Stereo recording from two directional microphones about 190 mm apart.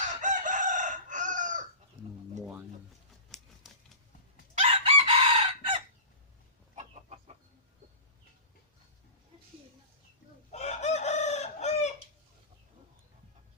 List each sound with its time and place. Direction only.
0.2 s chicken: 40° right (ahead or behind)
2.4 s music: centre (ahead or behind)
3.3 s typewriter: 5° left (ahead or behind)
4.8 s chicken: 30° right (ahead or behind)
10.5 s chicken: 35° left (ahead or behind)